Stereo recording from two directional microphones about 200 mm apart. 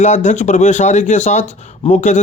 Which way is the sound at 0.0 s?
35° left (ahead or behind).